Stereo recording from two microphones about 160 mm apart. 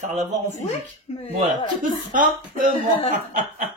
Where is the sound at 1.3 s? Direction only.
55° right (ahead or behind).